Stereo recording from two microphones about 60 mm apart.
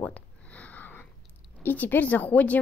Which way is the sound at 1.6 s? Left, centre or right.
Left.